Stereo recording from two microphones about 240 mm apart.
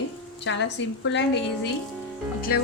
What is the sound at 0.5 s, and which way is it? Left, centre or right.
A woman's voice, left.